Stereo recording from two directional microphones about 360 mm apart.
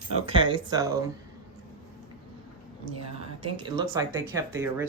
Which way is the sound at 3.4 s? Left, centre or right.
Centre.